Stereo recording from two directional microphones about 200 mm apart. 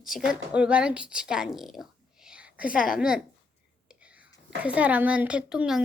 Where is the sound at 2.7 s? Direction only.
45° left (ahead or behind).